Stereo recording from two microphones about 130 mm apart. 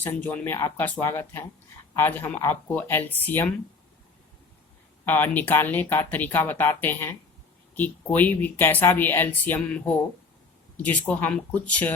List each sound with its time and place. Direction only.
0.0 s speech: 15° left (ahead or behind)
5.0 s speech: 15° left (ahead or behind)